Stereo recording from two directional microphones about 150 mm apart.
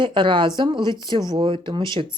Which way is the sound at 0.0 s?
30° right (ahead or behind).